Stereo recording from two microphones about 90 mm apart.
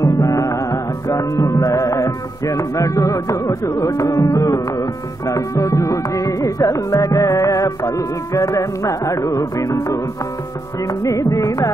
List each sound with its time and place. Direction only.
0.0 s music: 40° left (ahead or behind)